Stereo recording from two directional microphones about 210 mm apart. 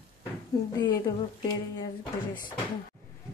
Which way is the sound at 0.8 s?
20° left (ahead or behind).